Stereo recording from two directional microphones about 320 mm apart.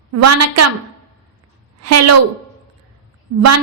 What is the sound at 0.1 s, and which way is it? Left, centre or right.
Speech, right.